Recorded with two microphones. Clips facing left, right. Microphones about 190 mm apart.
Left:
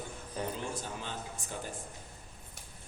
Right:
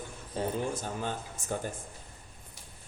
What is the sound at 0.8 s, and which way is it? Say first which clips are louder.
Speech: right 5 dB; 50° right (ahead or behind).